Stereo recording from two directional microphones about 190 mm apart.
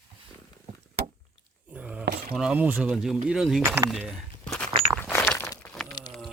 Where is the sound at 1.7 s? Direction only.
5° right (ahead or behind).